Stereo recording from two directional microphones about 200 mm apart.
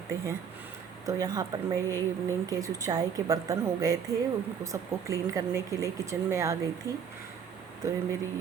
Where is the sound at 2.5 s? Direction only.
15° right (ahead or behind).